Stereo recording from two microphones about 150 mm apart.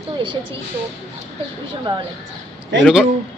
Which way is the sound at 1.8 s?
30° right (ahead or behind).